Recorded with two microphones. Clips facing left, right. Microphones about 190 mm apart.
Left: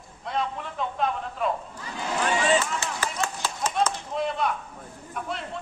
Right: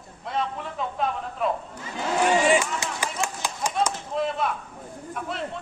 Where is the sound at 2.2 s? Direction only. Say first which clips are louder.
Right 3 dB; 15° right (ahead or behind).